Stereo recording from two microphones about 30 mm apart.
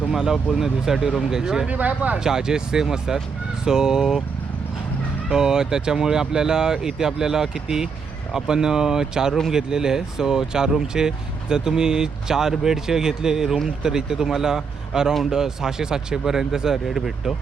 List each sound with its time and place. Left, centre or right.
0.1 s a man's voice: centre
1.6 s speech: right
2.1 s a man's voice: right
5.3 s a man's voice: right